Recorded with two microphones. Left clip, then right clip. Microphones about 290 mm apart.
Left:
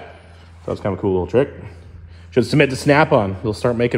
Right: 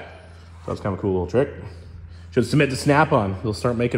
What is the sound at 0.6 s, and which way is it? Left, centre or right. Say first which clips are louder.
Speech: left 4 dB; left.